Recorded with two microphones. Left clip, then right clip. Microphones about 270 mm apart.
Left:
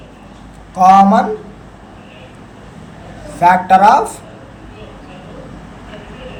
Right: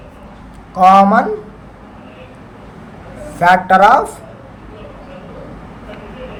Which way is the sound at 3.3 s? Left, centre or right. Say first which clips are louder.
Even; right.